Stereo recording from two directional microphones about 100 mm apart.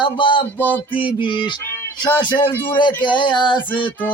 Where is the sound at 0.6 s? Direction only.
20° left (ahead or behind).